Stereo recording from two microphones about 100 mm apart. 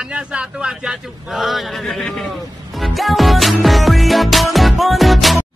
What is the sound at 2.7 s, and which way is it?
Music, centre (ahead or behind).